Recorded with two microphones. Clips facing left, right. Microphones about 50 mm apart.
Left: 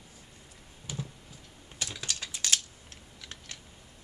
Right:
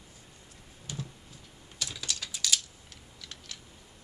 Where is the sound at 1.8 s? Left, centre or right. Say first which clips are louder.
Even; left.